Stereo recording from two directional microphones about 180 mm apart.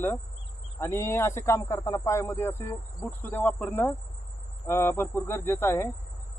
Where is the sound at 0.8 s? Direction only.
15° left (ahead or behind).